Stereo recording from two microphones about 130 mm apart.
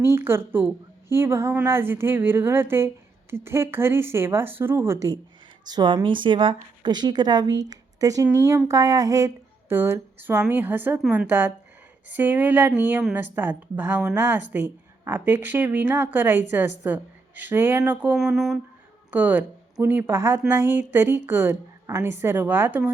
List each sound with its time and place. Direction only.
0.0 s a woman's voice: 20° right (ahead or behind)
18.2 s speech: 5° right (ahead or behind)
19.1 s a woman's voice: 15° right (ahead or behind)